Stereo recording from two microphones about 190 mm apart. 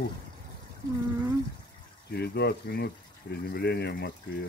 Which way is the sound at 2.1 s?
55° left (ahead or behind).